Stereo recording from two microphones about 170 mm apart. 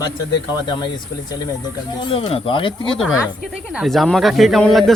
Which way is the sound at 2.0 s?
35° left (ahead or behind).